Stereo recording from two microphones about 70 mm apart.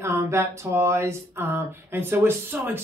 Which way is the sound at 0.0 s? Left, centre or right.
Right.